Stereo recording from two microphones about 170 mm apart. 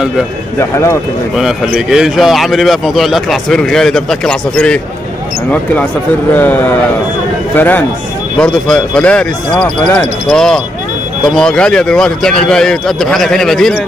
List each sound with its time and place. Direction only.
0.6 s speech: 15° left (ahead or behind)
1.3 s a man's voice: 5° right (ahead or behind)
6.3 s a man's voice: 10° left (ahead or behind)